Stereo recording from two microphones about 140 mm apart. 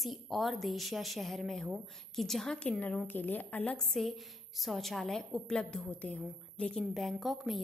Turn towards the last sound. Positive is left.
turn(degrees=0)  # may be behind; listen again after turning